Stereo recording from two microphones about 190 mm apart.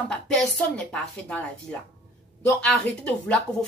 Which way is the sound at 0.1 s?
5° left (ahead or behind).